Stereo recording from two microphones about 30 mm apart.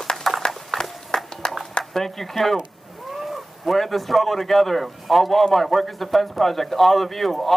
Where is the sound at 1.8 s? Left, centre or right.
Left.